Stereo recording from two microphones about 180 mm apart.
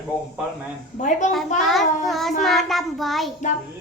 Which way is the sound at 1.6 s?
Centre (ahead or behind).